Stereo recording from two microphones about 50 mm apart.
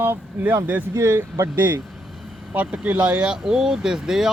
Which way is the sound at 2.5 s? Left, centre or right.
Right.